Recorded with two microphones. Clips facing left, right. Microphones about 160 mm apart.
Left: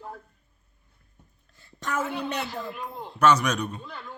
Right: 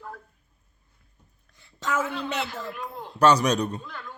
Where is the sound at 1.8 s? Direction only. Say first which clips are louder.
Right 2 dB; 90° right.